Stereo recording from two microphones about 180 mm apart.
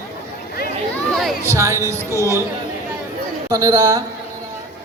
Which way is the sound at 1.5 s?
15° right (ahead or behind).